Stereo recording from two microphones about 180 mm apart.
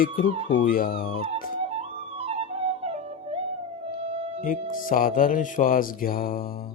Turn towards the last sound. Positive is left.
turn(degrees=55)  # may be behind; listen again after turning